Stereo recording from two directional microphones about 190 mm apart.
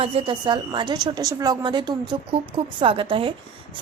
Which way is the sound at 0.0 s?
30° right (ahead or behind).